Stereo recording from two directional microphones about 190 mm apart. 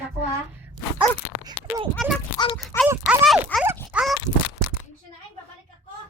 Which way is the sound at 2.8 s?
5° right (ahead or behind).